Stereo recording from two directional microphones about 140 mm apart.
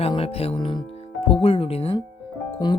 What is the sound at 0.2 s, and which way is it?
Speech, 45° left (ahead or behind).